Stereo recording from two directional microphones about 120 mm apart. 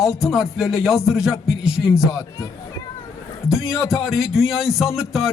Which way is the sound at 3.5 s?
5° right (ahead or behind).